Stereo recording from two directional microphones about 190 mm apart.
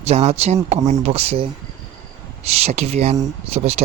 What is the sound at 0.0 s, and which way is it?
Speech, 35° right (ahead or behind).